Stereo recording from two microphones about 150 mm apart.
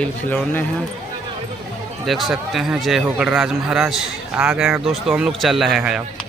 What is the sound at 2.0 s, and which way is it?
Speech, centre (ahead or behind).